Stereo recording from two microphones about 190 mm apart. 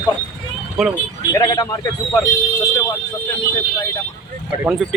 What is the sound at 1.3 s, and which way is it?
Speech, 15° left (ahead or behind).